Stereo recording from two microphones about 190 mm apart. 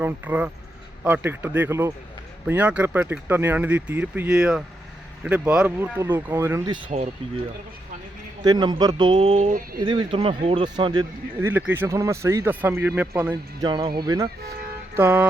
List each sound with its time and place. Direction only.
0.0 s speech: 10° right (ahead or behind)
8.4 s speech: 20° right (ahead or behind); by 9.8 s 45° right (ahead or behind)
9.8 s speech: 25° right (ahead or behind); by 13.3 s 10° right (ahead or behind)
13.6 s speech: 25° right (ahead or behind)